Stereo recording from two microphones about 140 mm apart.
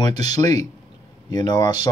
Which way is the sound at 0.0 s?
30° left (ahead or behind).